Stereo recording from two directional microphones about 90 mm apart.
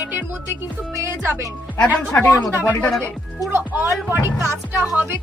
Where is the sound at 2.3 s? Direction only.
35° left (ahead or behind).